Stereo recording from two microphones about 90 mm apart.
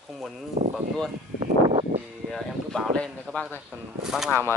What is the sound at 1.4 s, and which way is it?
Vehicle, 90° right.